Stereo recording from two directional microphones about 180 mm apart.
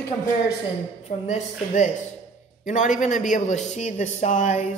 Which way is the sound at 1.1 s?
50° left (ahead or behind).